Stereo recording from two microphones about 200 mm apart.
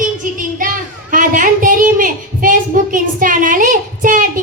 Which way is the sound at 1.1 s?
40° right (ahead or behind).